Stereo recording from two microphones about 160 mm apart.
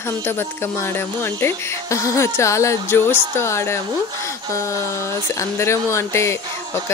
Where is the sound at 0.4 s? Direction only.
15° left (ahead or behind).